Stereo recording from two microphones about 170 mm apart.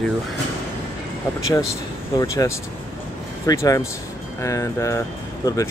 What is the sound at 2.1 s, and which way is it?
Speech, 20° left (ahead or behind).